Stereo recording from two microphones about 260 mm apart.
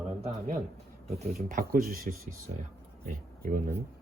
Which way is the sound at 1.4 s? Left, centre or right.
Right.